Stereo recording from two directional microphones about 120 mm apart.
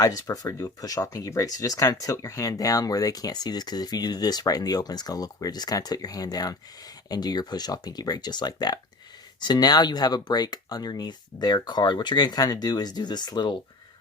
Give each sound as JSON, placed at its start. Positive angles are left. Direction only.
{"t": 0.0, "sound": "speech", "side_deg": 30}